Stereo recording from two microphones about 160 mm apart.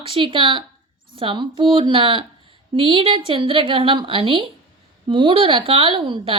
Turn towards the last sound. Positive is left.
turn(degrees=-30)  # may be behind; listen again after turning